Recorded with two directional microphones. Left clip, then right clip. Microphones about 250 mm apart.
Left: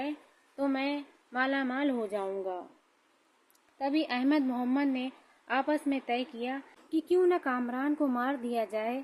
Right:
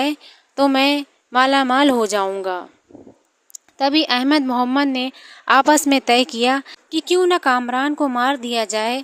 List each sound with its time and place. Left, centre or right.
0.5 s a woman's voice: right
3.8 s a woman's voice: right